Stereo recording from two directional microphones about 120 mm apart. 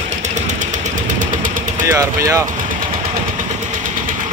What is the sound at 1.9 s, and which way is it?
Speech, 25° right (ahead or behind).